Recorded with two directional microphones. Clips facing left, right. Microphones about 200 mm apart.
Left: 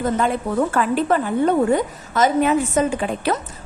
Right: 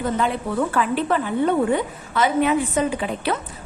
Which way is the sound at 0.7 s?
45° left (ahead or behind).